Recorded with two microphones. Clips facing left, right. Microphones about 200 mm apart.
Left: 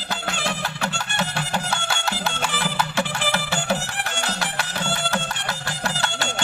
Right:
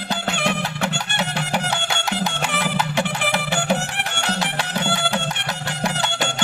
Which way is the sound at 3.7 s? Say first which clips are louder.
Right 2 dB; 65° right (ahead or behind).